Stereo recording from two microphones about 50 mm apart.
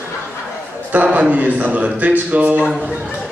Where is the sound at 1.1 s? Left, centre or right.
Right.